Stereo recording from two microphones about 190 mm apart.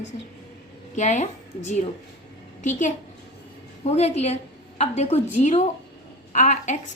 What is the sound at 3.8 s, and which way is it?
A woman's voice, 35° left (ahead or behind).